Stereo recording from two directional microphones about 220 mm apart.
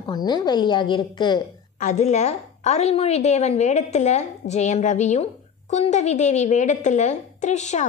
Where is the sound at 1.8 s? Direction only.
30° left (ahead or behind).